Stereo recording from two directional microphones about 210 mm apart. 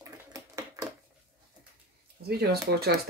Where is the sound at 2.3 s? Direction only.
50° right (ahead or behind).